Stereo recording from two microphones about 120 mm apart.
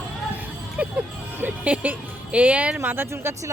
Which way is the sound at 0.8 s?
15° right (ahead or behind).